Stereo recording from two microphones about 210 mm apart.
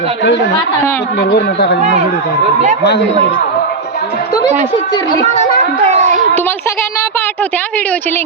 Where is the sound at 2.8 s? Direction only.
55° left (ahead or behind).